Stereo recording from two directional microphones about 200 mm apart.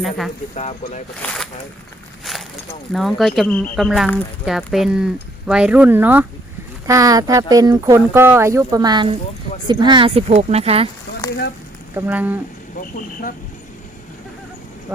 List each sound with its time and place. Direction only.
0.5 s speech: 35° left (ahead or behind)
1.2 s speech: 5° left (ahead or behind)
2.9 s speech: centre (ahead or behind); by 10.8 s 30° right (ahead or behind)
11.9 s speech: 10° right (ahead or behind)